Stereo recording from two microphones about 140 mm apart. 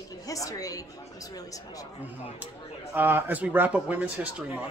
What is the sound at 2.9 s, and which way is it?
Speech, 15° right (ahead or behind).